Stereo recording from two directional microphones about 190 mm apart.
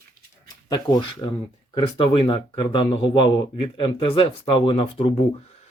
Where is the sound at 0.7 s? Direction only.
25° left (ahead or behind).